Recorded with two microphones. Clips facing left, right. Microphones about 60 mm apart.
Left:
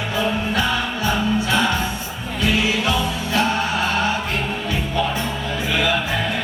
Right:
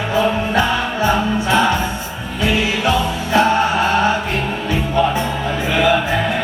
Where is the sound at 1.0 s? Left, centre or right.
Right.